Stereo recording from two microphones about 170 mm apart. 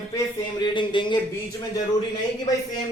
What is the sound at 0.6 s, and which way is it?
Speech, 30° left (ahead or behind).